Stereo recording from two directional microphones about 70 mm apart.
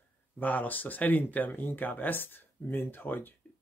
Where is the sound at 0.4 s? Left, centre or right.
Left.